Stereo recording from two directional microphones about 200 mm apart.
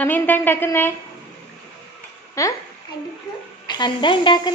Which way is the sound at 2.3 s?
15° left (ahead or behind).